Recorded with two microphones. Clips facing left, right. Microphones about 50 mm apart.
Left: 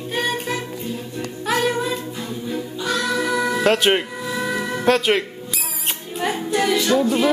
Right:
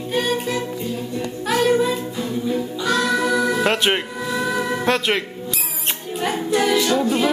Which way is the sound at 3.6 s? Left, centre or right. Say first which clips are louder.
Left 2 dB; centre.